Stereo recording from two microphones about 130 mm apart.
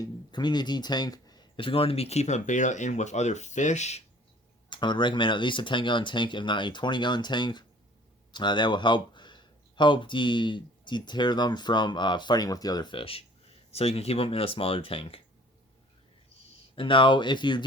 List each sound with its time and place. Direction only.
0.0 s speech: 35° left (ahead or behind); by 4.0 s 60° left (ahead or behind)
4.7 s speech: 35° left (ahead or behind)
16.7 s speech: 40° left (ahead or behind)